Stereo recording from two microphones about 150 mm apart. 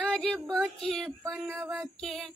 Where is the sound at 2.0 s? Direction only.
Centre (ahead or behind).